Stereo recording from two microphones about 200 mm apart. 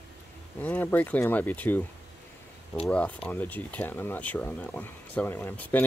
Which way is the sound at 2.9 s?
5° left (ahead or behind).